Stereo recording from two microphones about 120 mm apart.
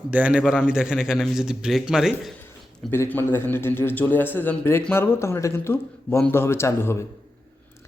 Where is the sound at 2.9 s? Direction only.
20° left (ahead or behind).